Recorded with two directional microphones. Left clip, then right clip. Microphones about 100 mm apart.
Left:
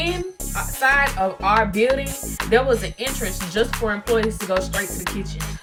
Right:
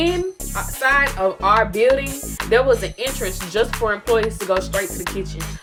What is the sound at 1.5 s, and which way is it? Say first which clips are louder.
Music: right 3 dB; centre (ahead or behind).